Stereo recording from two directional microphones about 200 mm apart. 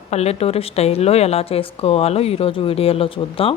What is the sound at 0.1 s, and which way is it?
A woman's voice, 30° left (ahead or behind).